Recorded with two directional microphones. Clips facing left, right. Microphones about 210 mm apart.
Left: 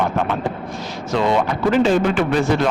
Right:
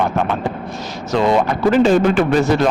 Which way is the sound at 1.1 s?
40° right (ahead or behind).